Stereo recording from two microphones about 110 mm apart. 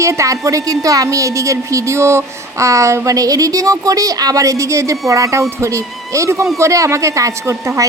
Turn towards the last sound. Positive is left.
turn(degrees=-30)  # may be behind; listen again after turning